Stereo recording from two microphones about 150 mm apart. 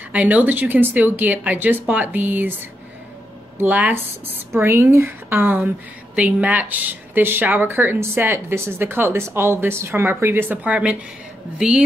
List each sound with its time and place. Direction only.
0.1 s speech: 10° right (ahead or behind)
3.5 s a woman's voice: 10° right (ahead or behind)